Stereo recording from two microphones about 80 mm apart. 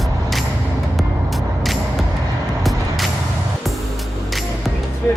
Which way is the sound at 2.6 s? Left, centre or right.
Centre.